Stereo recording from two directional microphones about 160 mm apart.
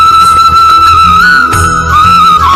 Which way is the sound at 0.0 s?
Centre (ahead or behind).